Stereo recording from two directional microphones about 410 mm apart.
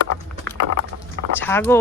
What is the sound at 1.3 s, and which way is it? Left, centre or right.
Speech, centre.